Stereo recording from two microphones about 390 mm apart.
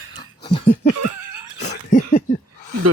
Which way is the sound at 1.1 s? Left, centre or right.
Right.